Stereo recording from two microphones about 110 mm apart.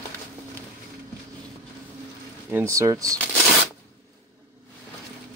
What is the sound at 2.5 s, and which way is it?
Speech, 25° right (ahead or behind).